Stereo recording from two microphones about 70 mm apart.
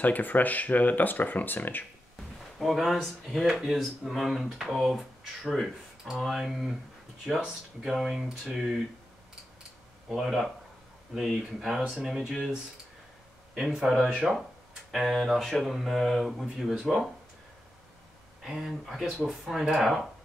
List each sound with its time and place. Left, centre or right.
0.0 s speech: left
2.6 s speech: centre
10.0 s speech: centre
13.6 s speech: centre
18.4 s speech: centre